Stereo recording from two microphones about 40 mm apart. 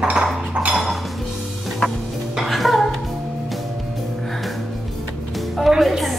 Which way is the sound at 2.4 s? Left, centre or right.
Centre.